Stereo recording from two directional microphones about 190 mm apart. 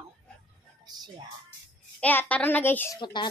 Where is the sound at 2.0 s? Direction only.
10° left (ahead or behind).